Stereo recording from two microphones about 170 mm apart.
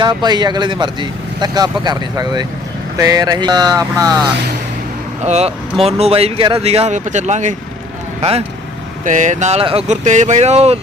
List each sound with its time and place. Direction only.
0.0 s speech: 25° right (ahead or behind)
5.2 s speech: 40° right (ahead or behind)
9.0 s speech: 45° right (ahead or behind)